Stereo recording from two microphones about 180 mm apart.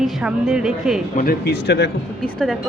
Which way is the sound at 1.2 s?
60° left (ahead or behind).